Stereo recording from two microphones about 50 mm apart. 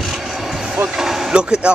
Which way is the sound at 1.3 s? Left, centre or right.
Centre.